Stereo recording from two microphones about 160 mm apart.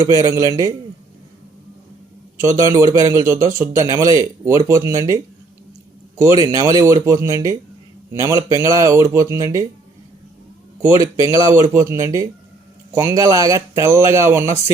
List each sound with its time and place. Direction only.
0.0 s speech: 20° right (ahead or behind)
2.5 s speech: 20° right (ahead or behind)
10.8 s speech: 20° right (ahead or behind)